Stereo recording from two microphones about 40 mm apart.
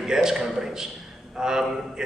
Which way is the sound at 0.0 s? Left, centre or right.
Centre.